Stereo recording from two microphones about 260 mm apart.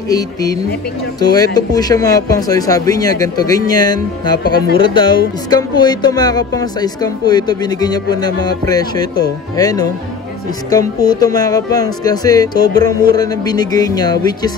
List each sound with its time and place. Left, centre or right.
0.1 s speech: centre
4.4 s speech: left
4.8 s speech: centre